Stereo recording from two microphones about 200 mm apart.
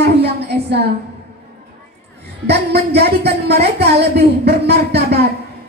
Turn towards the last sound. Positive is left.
turn(degrees=-55)  # may be behind; listen again after turning